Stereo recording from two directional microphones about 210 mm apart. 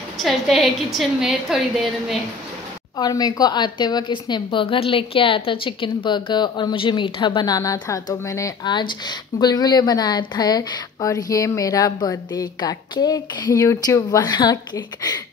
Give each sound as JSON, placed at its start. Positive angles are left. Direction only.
{"t": 0.2, "sound": "a woman's voice", "side_deg": 0}
{"t": 3.0, "sound": "a woman's voice", "side_deg": 20}